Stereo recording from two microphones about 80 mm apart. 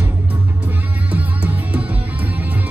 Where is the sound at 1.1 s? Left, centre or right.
Centre.